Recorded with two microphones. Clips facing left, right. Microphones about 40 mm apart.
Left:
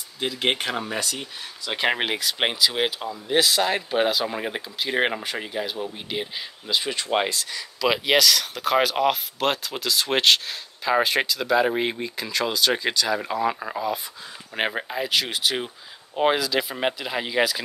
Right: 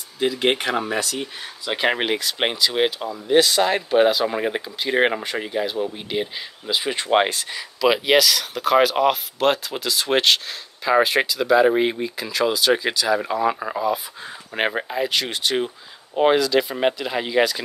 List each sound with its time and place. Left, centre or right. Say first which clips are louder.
0.2 s speech: right 4 dB; centre
6.6 s speech: right 2 dB; centre
7.0 s speech: right 5 dB; right
7.8 s speech: right 3 dB; centre